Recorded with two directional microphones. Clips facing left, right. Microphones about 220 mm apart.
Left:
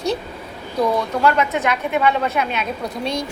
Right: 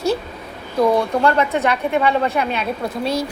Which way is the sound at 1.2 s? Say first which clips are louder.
Right 1 dB; 30° right (ahead or behind).